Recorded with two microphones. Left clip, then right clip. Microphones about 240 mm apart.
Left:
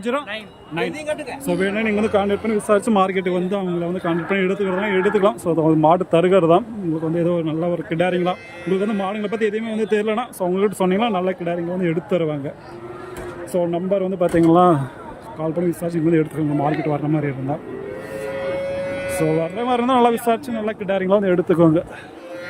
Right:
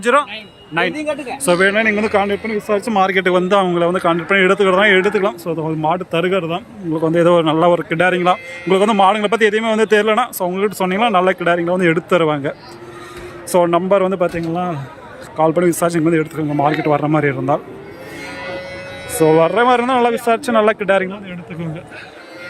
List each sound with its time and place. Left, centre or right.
0.0 s speech: centre
13.6 s a man's voice: right
13.9 s speech: centre
15.4 s speech: centre
19.4 s speech: centre
21.2 s speech: left